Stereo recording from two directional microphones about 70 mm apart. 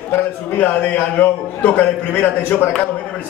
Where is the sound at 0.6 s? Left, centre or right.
Left.